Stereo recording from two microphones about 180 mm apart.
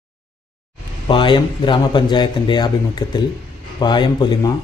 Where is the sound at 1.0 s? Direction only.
25° left (ahead or behind).